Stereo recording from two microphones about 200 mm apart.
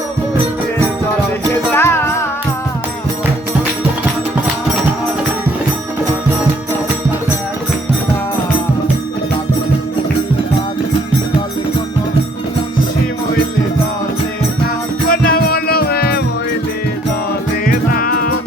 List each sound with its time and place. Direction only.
1.7 s music: 10° left (ahead or behind)
15.1 s music: 45° left (ahead or behind)
17.7 s music: 45° left (ahead or behind)